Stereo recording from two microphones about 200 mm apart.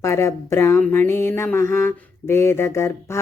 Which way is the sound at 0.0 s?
15° left (ahead or behind).